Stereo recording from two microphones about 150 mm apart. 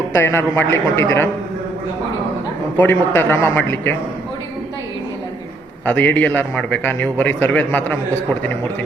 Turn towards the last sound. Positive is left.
turn(degrees=10)  # may be behind; listen again after turning